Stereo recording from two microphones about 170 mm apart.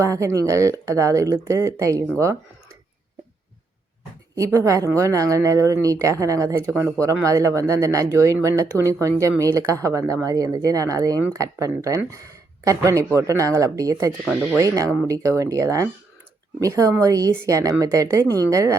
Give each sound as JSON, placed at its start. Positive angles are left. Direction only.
{"t": 0.0, "sound": "speech", "side_deg": -15}
{"t": 4.4, "sound": "speech", "side_deg": -20}